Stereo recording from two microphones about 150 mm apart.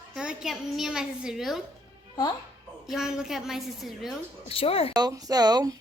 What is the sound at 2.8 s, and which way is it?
A woman's voice, 5° right (ahead or behind).